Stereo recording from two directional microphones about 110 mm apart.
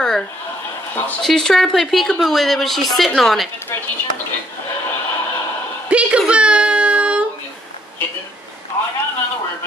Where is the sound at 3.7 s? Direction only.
20° left (ahead or behind).